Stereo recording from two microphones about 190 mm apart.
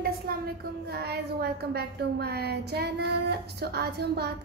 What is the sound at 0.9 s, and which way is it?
A woman's voice, 55° right (ahead or behind).